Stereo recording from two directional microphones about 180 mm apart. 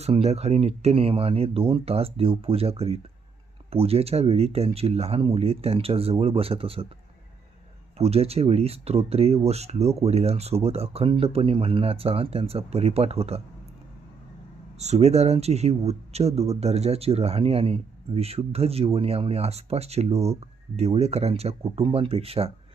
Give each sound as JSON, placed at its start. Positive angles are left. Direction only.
{"t": 0.0, "sound": "speech", "side_deg": -35}
{"t": 7.9, "sound": "speech", "side_deg": -35}
{"t": 14.8, "sound": "speech", "side_deg": -35}